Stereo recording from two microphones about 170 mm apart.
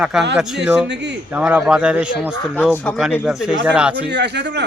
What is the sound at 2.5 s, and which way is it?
Speech, 10° left (ahead or behind).